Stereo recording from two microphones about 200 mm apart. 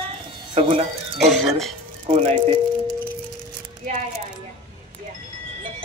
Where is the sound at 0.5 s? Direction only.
25° right (ahead or behind).